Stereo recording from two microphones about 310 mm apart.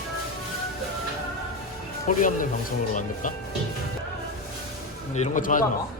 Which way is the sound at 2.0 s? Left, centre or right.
Left.